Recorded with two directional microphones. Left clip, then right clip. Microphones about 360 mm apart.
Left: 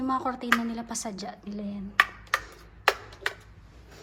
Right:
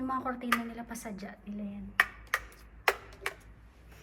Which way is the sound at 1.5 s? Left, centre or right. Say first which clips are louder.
Left 5 dB; left.